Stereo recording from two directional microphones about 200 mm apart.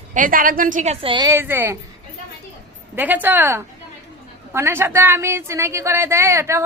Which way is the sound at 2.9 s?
10° right (ahead or behind).